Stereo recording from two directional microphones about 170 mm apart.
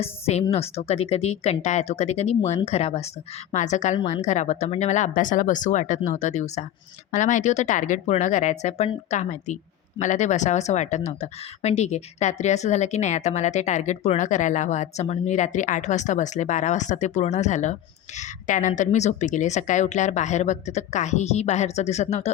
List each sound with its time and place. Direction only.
0.0 s speech: 40° left (ahead or behind)